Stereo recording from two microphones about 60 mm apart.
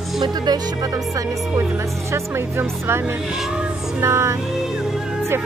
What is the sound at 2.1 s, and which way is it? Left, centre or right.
Speech, right.